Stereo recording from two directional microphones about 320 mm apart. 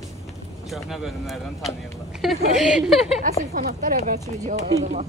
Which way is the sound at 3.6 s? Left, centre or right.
Right.